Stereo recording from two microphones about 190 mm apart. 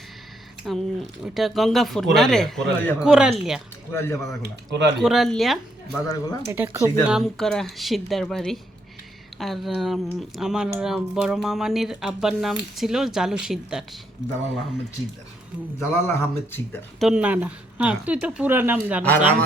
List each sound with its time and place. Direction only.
0.6 s speech: centre (ahead or behind)
3.9 s speech: 15° left (ahead or behind)
4.4 s speech: 65° right (ahead or behind)
5.0 s speech: centre (ahead or behind)
6.1 s speech: 20° left (ahead or behind)
6.5 s speech: 15° right (ahead or behind)
7.0 s speech: 5° right (ahead or behind)
14.2 s speech: 65° right (ahead or behind)
15.8 s speech: 15° left (ahead or behind)
17.0 s speech: 5° right (ahead or behind)